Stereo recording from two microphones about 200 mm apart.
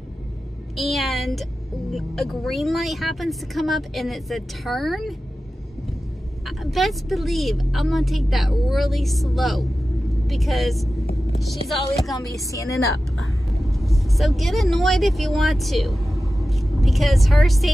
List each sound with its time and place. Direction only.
0.7 s speech: centre (ahead or behind)
6.4 s speech: centre (ahead or behind)
12.4 s a woman's voice: 15° left (ahead or behind)
13.2 s speech: centre (ahead or behind)
16.2 s vehicle: centre (ahead or behind)